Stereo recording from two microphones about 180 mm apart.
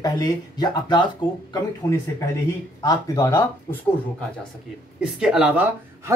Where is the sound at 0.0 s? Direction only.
25° left (ahead or behind).